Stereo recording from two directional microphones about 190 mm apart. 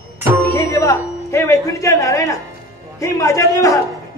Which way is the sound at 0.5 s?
15° left (ahead or behind).